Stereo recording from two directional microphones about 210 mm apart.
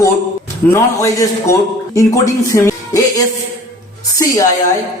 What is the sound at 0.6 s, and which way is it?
A man's voice, 15° left (ahead or behind).